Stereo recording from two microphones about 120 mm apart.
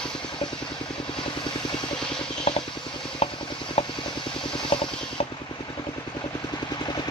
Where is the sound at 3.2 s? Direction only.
55° left (ahead or behind).